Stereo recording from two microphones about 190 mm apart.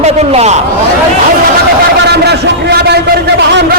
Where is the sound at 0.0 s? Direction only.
35° right (ahead or behind).